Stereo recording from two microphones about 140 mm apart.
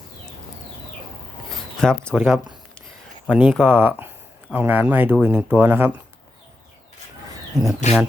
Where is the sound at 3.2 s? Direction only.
10° right (ahead or behind).